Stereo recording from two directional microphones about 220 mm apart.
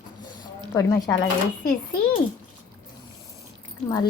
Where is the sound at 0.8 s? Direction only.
15° left (ahead or behind).